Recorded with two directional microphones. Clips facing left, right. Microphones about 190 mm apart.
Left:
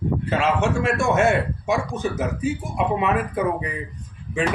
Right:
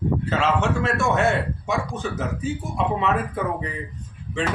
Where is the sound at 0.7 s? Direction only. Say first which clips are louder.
Left 2 dB; 15° left (ahead or behind).